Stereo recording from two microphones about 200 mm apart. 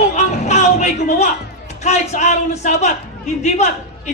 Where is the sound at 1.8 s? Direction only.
35° left (ahead or behind).